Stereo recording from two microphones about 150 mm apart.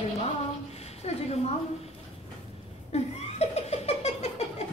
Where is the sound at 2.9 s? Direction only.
45° left (ahead or behind).